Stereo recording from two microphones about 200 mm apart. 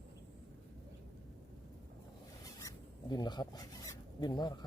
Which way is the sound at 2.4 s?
15° left (ahead or behind).